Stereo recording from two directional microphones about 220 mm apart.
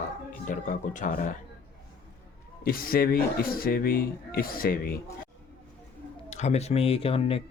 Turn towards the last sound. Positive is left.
turn(degrees=25)  # may be behind; listen again after turning